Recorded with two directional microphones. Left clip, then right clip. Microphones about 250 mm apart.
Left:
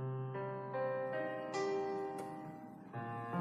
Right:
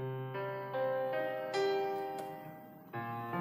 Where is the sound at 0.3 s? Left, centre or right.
Right.